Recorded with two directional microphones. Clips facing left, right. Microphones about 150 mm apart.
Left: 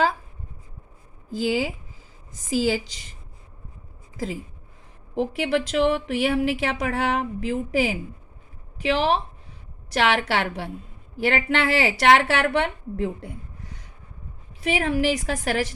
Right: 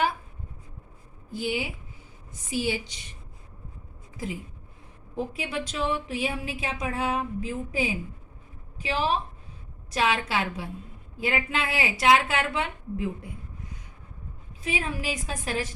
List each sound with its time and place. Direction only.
1.3 s a woman's voice: 90° left
4.2 s a woman's voice: 90° left
5.1 s speech: 80° left
8.8 s a woman's voice: 75° left (ahead or behind)
11.2 s a woman's voice: 80° left